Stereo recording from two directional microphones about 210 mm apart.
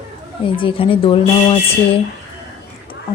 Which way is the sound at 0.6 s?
25° left (ahead or behind).